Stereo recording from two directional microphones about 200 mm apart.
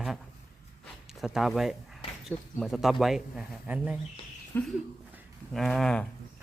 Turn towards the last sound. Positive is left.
turn(degrees=5)  # may be behind; listen again after turning